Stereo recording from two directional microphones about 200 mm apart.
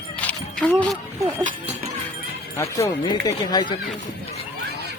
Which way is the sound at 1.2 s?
30° right (ahead or behind).